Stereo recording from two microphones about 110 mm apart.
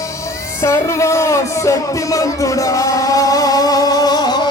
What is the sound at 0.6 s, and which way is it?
Music, 25° left (ahead or behind).